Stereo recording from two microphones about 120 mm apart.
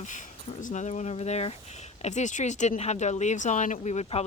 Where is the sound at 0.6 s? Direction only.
75° left (ahead or behind); by 1.5 s 60° left (ahead or behind).